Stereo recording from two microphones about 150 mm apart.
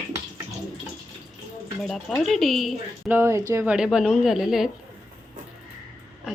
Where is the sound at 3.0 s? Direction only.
15° right (ahead or behind).